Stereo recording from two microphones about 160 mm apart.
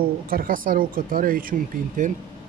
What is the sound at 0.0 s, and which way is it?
Speech, 65° right (ahead or behind).